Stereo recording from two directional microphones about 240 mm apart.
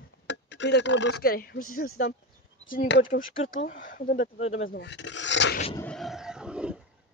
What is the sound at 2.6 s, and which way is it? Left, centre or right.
Speech, left.